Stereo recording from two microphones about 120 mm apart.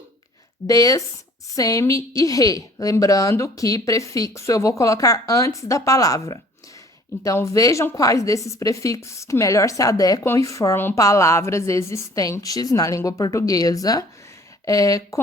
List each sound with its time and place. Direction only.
0.7 s a woman's voice: 30° left (ahead or behind)